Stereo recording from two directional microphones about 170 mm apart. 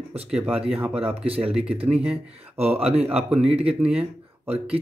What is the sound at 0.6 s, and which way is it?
Speech, 35° right (ahead or behind).